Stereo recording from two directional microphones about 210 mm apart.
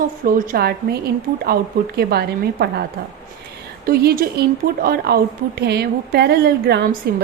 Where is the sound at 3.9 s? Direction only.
45° right (ahead or behind).